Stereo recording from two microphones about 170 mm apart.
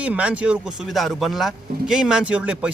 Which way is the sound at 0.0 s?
10° right (ahead or behind).